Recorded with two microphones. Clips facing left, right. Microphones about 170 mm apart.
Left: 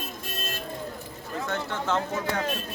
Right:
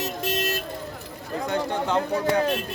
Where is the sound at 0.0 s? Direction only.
90° right.